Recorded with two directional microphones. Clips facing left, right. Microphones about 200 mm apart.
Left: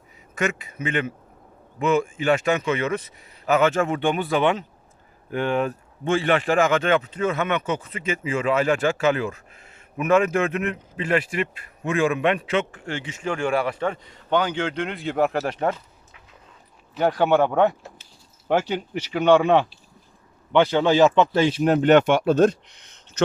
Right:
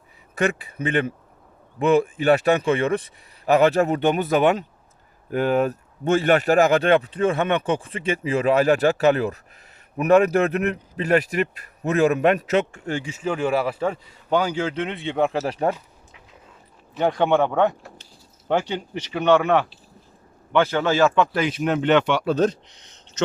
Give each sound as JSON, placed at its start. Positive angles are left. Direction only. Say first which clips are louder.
{"t": 0.3, "sound": "speech", "louder": "right 3 dB", "side_deg": -35}
{"t": 13.1, "sound": "a man's voice", "louder": "right 1 dB", "side_deg": -5}
{"t": 16.9, "sound": "a man's voice", "louder": "even", "side_deg": 0}